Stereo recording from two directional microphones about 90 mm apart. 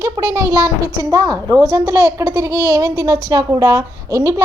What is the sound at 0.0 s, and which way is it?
Speech, 35° right (ahead or behind).